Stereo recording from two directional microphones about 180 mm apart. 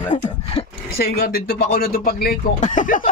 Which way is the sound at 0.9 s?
60° left (ahead or behind).